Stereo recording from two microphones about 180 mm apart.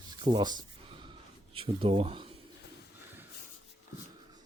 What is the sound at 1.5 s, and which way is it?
Speech, 30° right (ahead or behind).